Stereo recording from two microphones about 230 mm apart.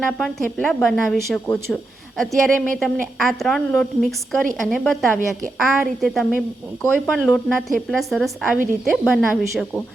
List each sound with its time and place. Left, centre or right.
0.2 s a woman's voice: centre